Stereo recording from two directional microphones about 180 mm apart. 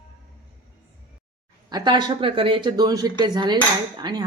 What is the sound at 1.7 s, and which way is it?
Speech, 25° right (ahead or behind).